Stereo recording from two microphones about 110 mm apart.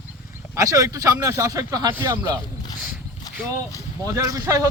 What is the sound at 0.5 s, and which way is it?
Speech, 30° right (ahead or behind).